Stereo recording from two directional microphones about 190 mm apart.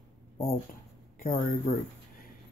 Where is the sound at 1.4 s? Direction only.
45° left (ahead or behind).